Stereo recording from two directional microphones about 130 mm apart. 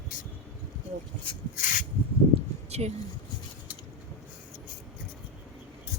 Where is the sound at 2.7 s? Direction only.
55° right (ahead or behind).